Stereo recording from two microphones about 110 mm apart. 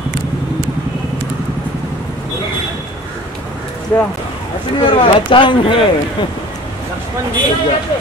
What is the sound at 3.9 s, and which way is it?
Speech, 25° left (ahead or behind).